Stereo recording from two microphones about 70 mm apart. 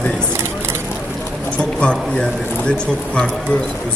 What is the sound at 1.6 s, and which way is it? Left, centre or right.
Speech, centre.